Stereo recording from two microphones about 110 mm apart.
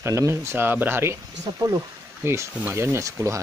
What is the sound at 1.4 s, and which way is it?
Speech, 30° right (ahead or behind).